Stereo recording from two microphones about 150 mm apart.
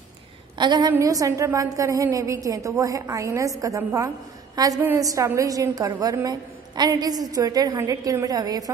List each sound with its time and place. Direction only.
0.6 s a woman's voice: 30° right (ahead or behind)